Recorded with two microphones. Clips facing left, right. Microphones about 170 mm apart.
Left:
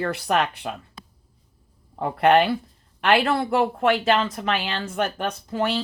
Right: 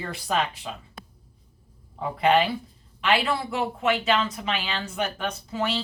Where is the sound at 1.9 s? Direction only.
65° left (ahead or behind).